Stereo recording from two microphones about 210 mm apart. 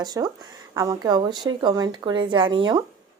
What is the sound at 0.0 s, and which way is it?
A woman's voice, 20° right (ahead or behind).